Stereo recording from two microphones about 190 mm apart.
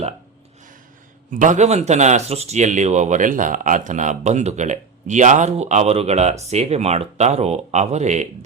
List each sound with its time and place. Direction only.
1.3 s speech: 40° right (ahead or behind)